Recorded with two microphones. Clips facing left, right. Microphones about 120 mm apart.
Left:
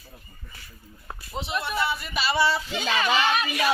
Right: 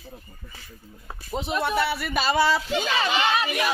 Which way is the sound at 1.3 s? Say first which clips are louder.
Right 4 dB; 50° right (ahead or behind).